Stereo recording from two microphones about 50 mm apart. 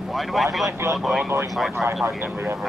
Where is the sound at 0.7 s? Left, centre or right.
Right.